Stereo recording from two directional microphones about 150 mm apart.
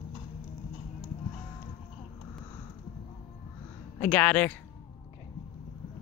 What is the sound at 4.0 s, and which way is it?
Speech, 10° left (ahead or behind).